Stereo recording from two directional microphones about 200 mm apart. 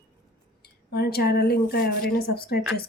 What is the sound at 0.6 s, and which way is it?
Speech, 50° left (ahead or behind).